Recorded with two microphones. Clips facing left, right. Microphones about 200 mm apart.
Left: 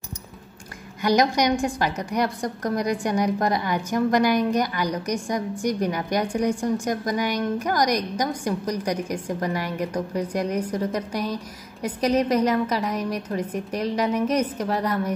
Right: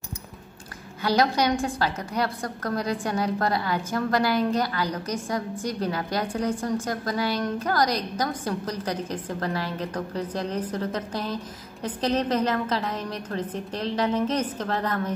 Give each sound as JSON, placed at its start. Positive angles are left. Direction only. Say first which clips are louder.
{"t": 1.0, "sound": "a woman's voice", "louder": "left 2 dB", "side_deg": 15}